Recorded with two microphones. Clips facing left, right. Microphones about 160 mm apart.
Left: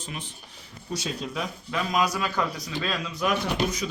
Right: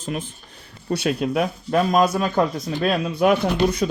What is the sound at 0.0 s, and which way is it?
Speech, 50° right (ahead or behind).